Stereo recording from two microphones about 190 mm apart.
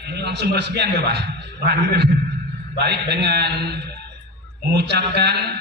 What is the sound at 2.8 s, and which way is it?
Speech, 60° right (ahead or behind).